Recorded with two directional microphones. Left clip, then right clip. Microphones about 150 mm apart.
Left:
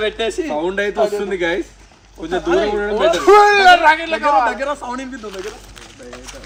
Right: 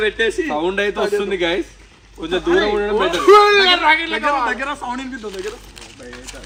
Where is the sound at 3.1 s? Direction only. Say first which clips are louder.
Even; 45° left (ahead or behind).